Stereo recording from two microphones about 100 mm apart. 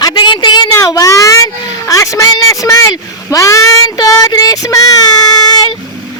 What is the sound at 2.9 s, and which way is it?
Speech, 30° left (ahead or behind).